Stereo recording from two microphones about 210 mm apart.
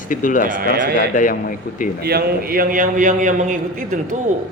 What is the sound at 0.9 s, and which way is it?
Speech, 40° left (ahead or behind).